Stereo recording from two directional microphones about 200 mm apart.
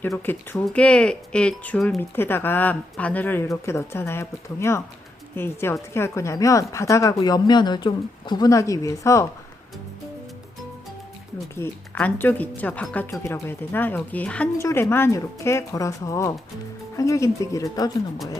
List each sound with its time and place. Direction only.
0.0 s speech: 10° left (ahead or behind)
11.5 s speech: 10° left (ahead or behind)